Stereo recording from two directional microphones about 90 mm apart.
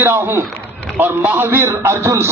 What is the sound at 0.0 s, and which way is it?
Speech, 25° right (ahead or behind).